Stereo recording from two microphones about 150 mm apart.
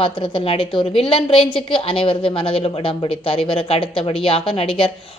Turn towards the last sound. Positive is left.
turn(degrees=35)  # may be behind; listen again after turning